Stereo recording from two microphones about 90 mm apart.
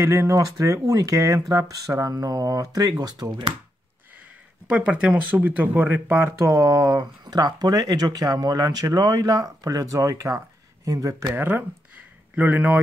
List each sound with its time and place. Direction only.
0.0 s speech: 30° right (ahead or behind); by 3.3 s 50° right (ahead or behind)
4.6 s speech: 15° right (ahead or behind); by 11.2 s 35° right (ahead or behind)
11.3 s speech: 20° right (ahead or behind)